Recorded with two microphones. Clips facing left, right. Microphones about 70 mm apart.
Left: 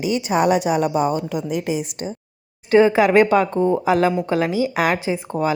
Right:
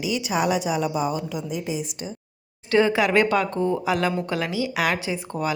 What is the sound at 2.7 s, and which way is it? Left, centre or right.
Speech, left.